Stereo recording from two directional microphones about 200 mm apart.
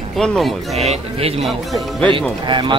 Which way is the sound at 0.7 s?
30° right (ahead or behind).